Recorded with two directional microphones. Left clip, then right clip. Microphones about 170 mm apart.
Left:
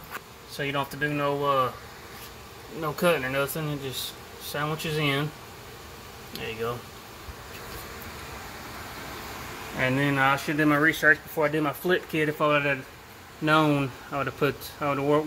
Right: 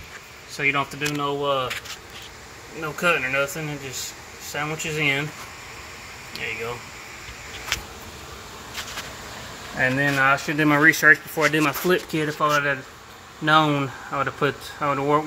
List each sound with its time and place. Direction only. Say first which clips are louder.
0.6 s speech: right 6 dB; 5° right (ahead or behind)
1.4 s speech: even; 15° left (ahead or behind)
3.0 s speech: right 4 dB; 30° left (ahead or behind)
9.8 s speech: right 4 dB; centre (ahead or behind)
10.6 s speech: right 6 dB; 30° right (ahead or behind)
12.3 s speech: right 3 dB; centre (ahead or behind)